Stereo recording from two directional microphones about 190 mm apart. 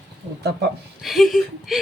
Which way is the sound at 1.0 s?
Centre (ahead or behind).